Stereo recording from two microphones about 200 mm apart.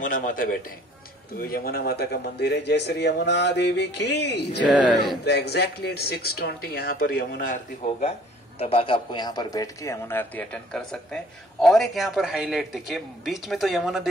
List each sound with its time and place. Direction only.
0.0 s speech: 40° left (ahead or behind); by 4.6 s 55° left (ahead or behind)
4.6 s a man's voice: 5° right (ahead or behind)
5.2 s speech: 55° left (ahead or behind); by 8.1 s 40° left (ahead or behind)
8.5 s a man's voice: 30° left (ahead or behind); by 14.0 s centre (ahead or behind)